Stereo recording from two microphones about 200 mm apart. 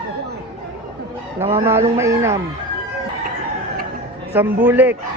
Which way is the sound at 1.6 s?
15° right (ahead or behind).